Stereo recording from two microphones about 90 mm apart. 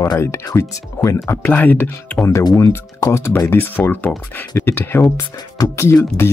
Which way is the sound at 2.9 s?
35° left (ahead or behind).